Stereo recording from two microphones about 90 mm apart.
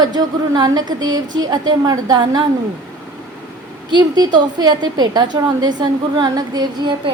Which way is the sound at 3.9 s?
55° right (ahead or behind).